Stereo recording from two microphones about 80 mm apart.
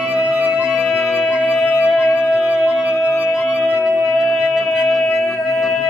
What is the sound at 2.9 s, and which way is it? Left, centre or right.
Music, left.